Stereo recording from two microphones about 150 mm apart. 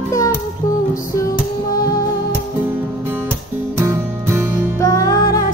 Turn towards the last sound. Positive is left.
turn(degrees=25)  # may be behind; listen again after turning